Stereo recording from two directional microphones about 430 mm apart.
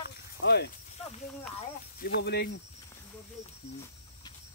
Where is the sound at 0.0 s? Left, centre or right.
Left.